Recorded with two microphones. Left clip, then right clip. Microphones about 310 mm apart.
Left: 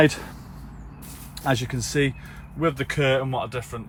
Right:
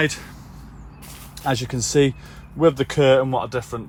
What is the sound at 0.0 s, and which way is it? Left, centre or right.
Speech, centre.